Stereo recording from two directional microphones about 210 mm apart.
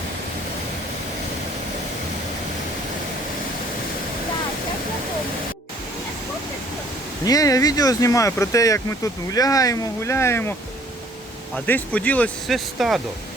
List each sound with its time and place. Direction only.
7.3 s speech: 15° left (ahead or behind)
11.5 s speech: 5° left (ahead or behind)